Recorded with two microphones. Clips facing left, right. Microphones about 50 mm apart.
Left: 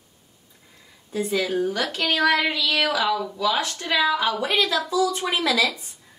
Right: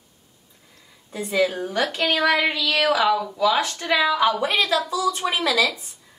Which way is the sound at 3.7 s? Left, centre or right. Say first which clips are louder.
Right 3 dB; right.